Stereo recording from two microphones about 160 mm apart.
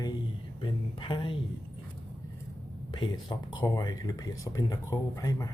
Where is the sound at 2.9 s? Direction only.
30° left (ahead or behind).